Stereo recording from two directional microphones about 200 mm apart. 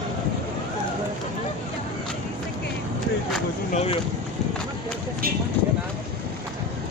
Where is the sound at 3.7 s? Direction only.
30° left (ahead or behind).